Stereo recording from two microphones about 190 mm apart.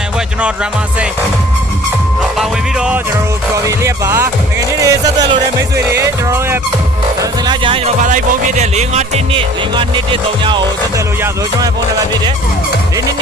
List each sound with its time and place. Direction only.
0.4 s music: 5° right (ahead or behind)
2.4 s music: 5° right (ahead or behind)
3.7 s music: 15° right (ahead or behind)
7.2 s speech: 20° right (ahead or behind)
8.0 s music: 40° right (ahead or behind); by 11.0 s 25° right (ahead or behind)